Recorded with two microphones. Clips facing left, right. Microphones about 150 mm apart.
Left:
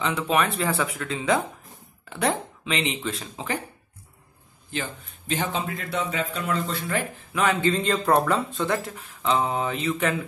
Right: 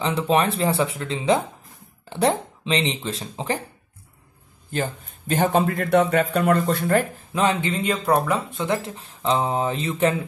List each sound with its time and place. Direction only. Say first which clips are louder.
0.0 s speech: right 3 dB; 30° right (ahead or behind)
5.3 s speech: right 8 dB; 50° right (ahead or behind)
7.6 s speech: left 1 dB; 15° right (ahead or behind); by 10.1 s 35° right (ahead or behind)